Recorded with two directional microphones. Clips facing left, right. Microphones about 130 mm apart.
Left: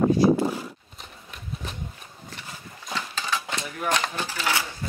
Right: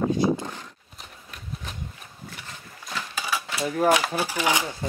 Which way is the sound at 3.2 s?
10° right (ahead or behind).